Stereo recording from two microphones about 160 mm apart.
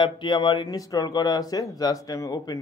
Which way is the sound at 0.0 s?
30° left (ahead or behind).